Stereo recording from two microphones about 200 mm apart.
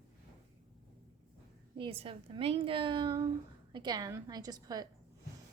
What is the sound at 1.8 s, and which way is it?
A woman's voice, 30° right (ahead or behind).